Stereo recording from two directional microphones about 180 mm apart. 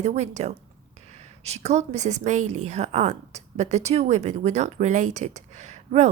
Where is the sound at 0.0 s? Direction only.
40° right (ahead or behind).